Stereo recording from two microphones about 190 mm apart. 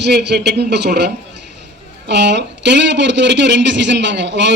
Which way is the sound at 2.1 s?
70° right (ahead or behind).